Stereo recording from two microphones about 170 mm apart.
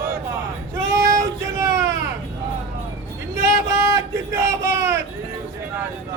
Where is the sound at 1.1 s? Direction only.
20° right (ahead or behind).